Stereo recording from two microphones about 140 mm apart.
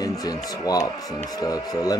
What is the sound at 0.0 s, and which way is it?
Speech, 25° left (ahead or behind).